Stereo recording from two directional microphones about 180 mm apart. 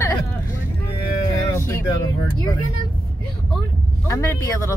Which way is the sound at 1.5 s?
15° left (ahead or behind).